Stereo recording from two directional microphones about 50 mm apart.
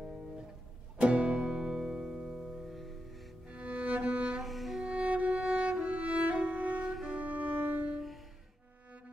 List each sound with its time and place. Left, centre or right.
1.2 s music: centre
3.4 s music: right
4.4 s music: centre
4.8 s music: right